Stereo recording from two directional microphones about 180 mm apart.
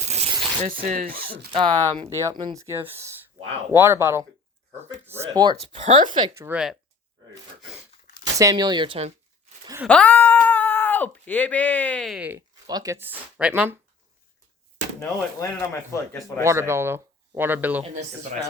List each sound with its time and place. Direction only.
0.0 s a sound: 40° right (ahead or behind)
0.8 s speech: 50° right (ahead or behind)
1.5 s speech: 25° right (ahead or behind)
5.7 s speech: 40° right (ahead or behind)
6.2 s speech: 15° right (ahead or behind)
8.2 s speech: 20° right (ahead or behind)
9.9 s speech: 10° left (ahead or behind); by 12.4 s 5° right (ahead or behind)
12.6 s speech: 20° right (ahead or behind)
15.4 s speech: 15° left (ahead or behind)
16.4 s speech: 15° right (ahead or behind)
17.8 s speech: 40° right (ahead or behind)